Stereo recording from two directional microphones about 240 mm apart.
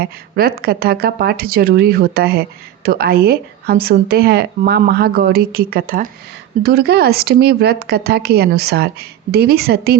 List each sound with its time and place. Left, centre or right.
0.0 s speech: right